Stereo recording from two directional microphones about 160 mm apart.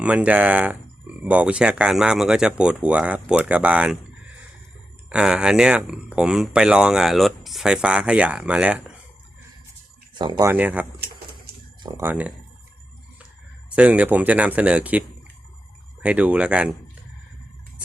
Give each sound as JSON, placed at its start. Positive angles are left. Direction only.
{"t": 0.0, "sound": "speech", "side_deg": -10}
{"t": 5.0, "sound": "speech", "side_deg": -5}
{"t": 10.3, "sound": "speech", "side_deg": -10}
{"t": 11.8, "sound": "speech", "side_deg": -25}
{"t": 12.0, "sound": "speech", "side_deg": -10}
{"t": 13.7, "sound": "speech", "side_deg": -10}